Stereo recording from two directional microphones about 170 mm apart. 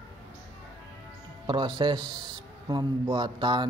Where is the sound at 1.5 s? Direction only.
30° right (ahead or behind).